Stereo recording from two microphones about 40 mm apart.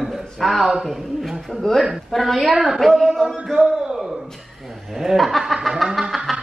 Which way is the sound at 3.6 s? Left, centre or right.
Centre.